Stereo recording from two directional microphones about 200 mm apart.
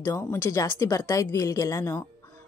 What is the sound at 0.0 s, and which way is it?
Speech, 10° left (ahead or behind).